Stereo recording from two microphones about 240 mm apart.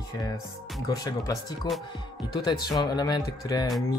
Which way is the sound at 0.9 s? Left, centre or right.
Centre.